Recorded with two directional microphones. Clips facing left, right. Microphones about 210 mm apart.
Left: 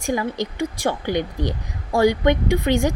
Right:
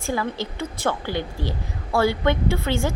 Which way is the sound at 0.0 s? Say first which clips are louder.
Left 3 dB; 15° left (ahead or behind).